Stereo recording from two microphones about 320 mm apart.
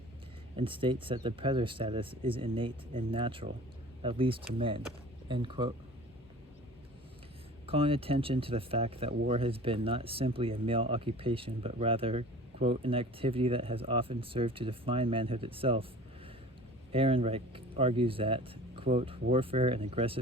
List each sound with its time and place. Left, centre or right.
0.5 s speech: centre
7.7 s speech: centre
16.9 s speech: centre